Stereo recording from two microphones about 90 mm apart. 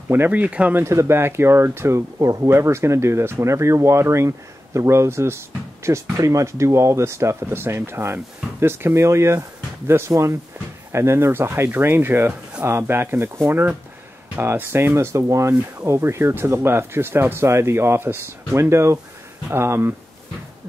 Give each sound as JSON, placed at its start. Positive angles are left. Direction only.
{"t": 0.1, "sound": "speech", "side_deg": -20}
{"t": 0.8, "sound": "speech", "side_deg": -30}